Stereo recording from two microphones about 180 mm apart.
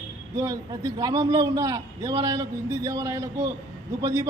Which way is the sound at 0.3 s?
20° right (ahead or behind).